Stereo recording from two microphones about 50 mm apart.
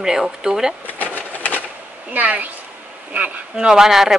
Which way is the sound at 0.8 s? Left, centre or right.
Left.